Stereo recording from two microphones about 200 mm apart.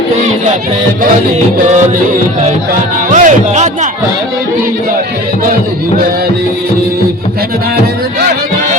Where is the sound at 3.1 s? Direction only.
35° right (ahead or behind).